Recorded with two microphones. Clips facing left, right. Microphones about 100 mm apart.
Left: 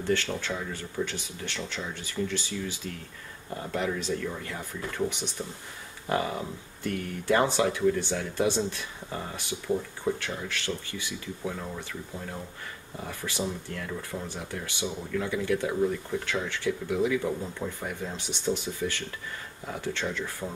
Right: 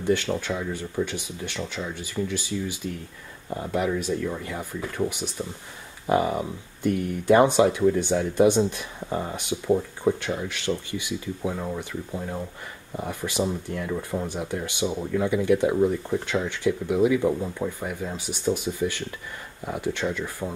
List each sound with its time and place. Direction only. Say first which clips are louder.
0.0 s speech: right 4 dB; 15° right (ahead or behind)
17.7 s speech: right 4 dB; 5° right (ahead or behind)